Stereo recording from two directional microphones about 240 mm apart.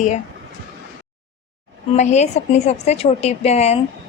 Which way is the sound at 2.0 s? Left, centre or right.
Left.